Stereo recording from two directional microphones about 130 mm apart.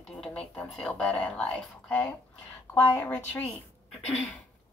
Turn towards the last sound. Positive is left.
turn(degrees=10)  # may be behind; listen again after turning